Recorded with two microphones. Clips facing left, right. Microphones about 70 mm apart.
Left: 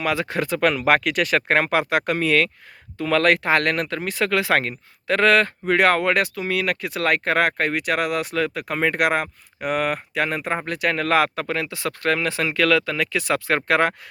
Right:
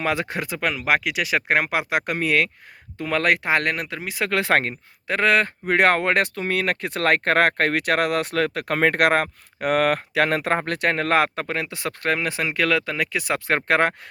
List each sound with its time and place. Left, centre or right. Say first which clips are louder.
0.0 s speech: left 1 dB; right
0.7 s speech: left 3 dB; centre
4.3 s speech: right 1 dB; right
5.0 s speech: left 2 dB; centre
6.3 s speech: even; right
10.8 s speech: left 1 dB; right